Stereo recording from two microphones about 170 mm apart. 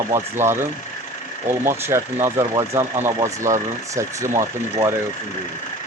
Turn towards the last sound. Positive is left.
turn(degrees=-20)  # may be behind; listen again after turning